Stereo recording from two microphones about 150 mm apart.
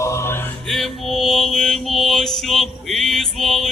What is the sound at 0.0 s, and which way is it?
Mantra, 20° left (ahead or behind).